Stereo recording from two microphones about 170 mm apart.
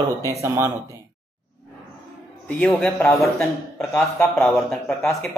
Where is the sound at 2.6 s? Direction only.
5° left (ahead or behind).